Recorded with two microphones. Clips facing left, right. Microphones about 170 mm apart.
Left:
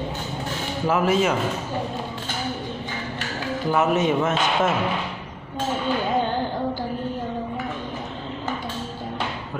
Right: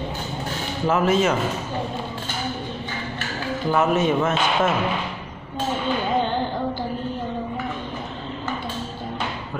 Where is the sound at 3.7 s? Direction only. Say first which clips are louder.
Right 1 dB; 15° left (ahead or behind).